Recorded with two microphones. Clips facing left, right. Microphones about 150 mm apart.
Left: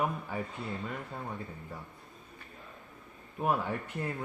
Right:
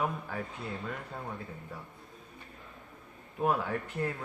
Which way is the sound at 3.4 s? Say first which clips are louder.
Right 1 dB; 5° left (ahead or behind).